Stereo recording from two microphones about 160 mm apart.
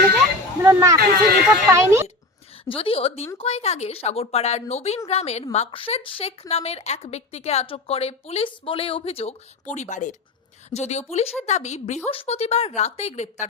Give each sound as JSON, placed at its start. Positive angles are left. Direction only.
{"t": 0.6, "sound": "speech", "side_deg": -15}
{"t": 0.9, "sound": "speech", "side_deg": -65}
{"t": 1.6, "sound": "speech", "side_deg": -20}
{"t": 2.6, "sound": "a woman's voice", "side_deg": 35}